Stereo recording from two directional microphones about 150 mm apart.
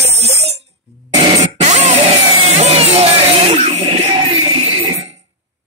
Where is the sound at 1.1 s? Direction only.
30° right (ahead or behind).